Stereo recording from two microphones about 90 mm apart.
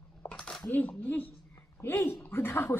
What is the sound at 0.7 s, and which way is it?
A woman's voice, 20° left (ahead or behind).